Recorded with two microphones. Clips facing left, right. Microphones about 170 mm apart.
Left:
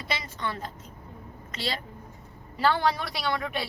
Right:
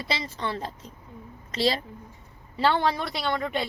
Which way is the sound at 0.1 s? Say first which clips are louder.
Right 2 dB; 30° right (ahead or behind).